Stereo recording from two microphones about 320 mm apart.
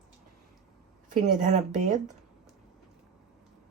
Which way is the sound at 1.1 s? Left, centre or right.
Right.